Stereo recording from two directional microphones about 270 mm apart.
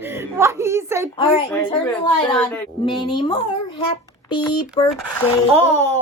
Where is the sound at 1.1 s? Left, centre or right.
Centre.